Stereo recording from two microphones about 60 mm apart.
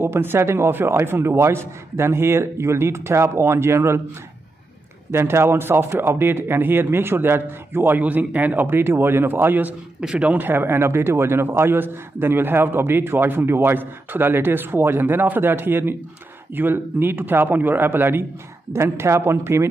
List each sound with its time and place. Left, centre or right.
0.0 s a man's voice: right
5.1 s speech: right
8.0 s speech: right
9.9 s speech: centre; by 18.2 s right
18.7 s a man's voice: right